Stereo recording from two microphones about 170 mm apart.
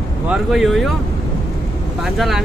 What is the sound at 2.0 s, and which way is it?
Speech, centre (ahead or behind).